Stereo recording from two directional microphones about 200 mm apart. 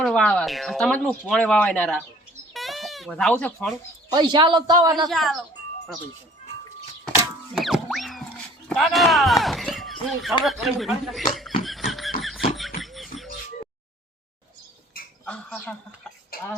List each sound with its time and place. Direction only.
0.0 s speech: 5° left (ahead or behind)
2.5 s music: centre (ahead or behind)
4.1 s a man's voice: 20° right (ahead or behind)
5.0 s speech: centre (ahead or behind)
7.5 s music: centre (ahead or behind)
8.7 s a sound: centre (ahead or behind)
10.4 s speech: centre (ahead or behind)
11.6 s a sound: centre (ahead or behind)
15.2 s speech: 5° left (ahead or behind)
16.3 s a sound: 50° left (ahead or behind)